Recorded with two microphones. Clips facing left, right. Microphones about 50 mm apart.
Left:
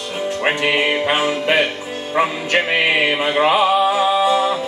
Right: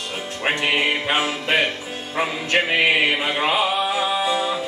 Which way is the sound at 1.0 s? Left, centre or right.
Left.